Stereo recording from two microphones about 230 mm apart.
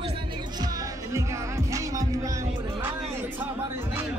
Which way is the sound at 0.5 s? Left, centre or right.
Centre.